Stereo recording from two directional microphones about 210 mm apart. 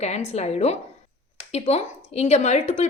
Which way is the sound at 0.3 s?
30° left (ahead or behind).